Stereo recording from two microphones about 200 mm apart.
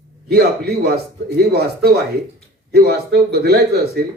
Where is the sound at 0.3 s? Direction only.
55° right (ahead or behind).